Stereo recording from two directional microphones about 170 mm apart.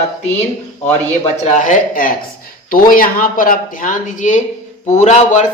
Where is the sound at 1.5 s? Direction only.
45° left (ahead or behind).